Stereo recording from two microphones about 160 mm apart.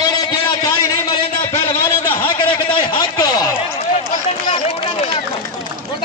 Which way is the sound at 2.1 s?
30° left (ahead or behind).